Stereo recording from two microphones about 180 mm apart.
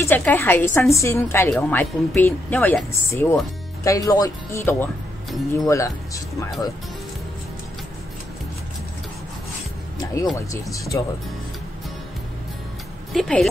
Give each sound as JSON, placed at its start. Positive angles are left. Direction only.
{"t": 0.0, "sound": "speech", "side_deg": 10}
{"t": 9.9, "sound": "speech", "side_deg": 20}
{"t": 13.1, "sound": "speech", "side_deg": 0}